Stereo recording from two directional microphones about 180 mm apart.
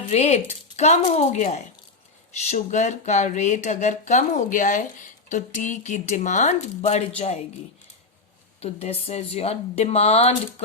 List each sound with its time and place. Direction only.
0.1 s speech: 40° left (ahead or behind)
8.6 s speech: 35° left (ahead or behind)